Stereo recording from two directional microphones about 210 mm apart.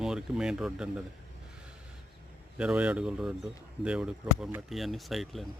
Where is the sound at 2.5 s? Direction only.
5° right (ahead or behind).